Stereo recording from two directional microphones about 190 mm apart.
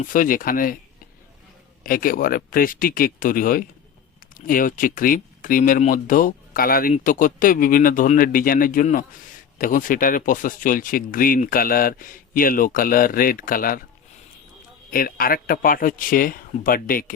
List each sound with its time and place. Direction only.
0.0 s speech: 45° left (ahead or behind)
1.8 s speech: 50° left (ahead or behind)
14.8 s speech: 50° left (ahead or behind)